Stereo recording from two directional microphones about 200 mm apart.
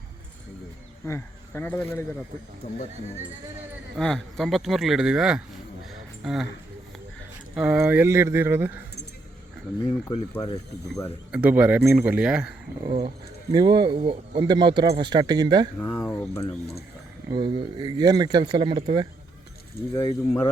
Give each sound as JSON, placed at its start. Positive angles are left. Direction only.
{"t": 1.0, "sound": "speech", "side_deg": 15}
{"t": 2.6, "sound": "speech", "side_deg": 35}
{"t": 3.9, "sound": "speech", "side_deg": 0}
{"t": 5.9, "sound": "a sound", "side_deg": 0}
{"t": 7.5, "sound": "speech", "side_deg": -5}
{"t": 11.3, "sound": "speech", "side_deg": -5}
{"t": 12.8, "sound": "speech", "side_deg": -20}
{"t": 15.8, "sound": "speech", "side_deg": 15}
{"t": 17.2, "sound": "speech", "side_deg": -25}
{"t": 20.0, "sound": "speech", "side_deg": 15}